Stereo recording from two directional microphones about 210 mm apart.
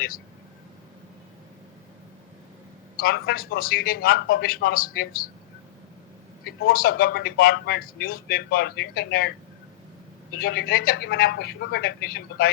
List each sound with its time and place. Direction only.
3.0 s speech: 45° left (ahead or behind)
6.4 s speech: 45° left (ahead or behind)
10.3 s speech: 50° left (ahead or behind)